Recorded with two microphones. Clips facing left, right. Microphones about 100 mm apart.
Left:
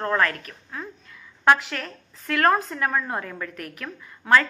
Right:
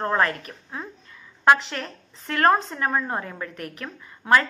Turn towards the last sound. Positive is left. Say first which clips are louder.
# right 1 dB
turn(degrees=-5)  # may be behind; listen again after turning